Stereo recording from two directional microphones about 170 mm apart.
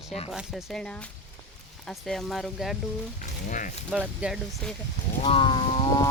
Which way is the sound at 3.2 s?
50° left (ahead or behind).